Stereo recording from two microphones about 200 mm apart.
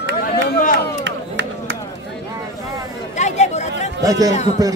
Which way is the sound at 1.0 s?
60° right (ahead or behind).